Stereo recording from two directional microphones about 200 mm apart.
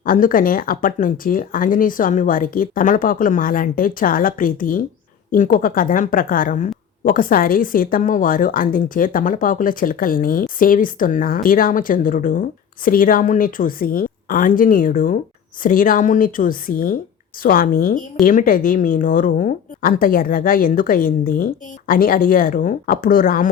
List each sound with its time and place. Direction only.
0.0 s a woman's voice: 45° left (ahead or behind)